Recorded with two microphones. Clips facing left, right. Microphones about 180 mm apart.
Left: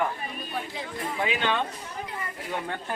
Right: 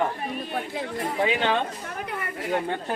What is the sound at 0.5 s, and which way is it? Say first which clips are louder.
Chatter: right 4 dB; 50° right (ahead or behind).